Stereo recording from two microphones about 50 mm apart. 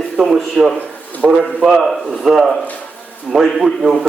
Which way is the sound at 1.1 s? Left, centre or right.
Left.